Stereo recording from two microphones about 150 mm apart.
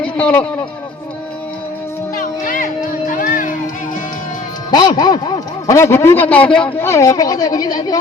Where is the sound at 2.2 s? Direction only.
65° left (ahead or behind).